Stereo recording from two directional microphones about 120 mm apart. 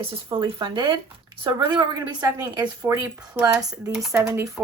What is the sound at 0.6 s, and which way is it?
Speech, 40° right (ahead or behind).